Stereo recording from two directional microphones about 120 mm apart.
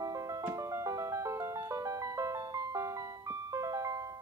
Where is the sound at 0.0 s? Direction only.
30° right (ahead or behind).